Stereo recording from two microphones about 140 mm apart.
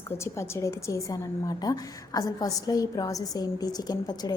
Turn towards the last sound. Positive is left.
turn(degrees=30)  # may be behind; listen again after turning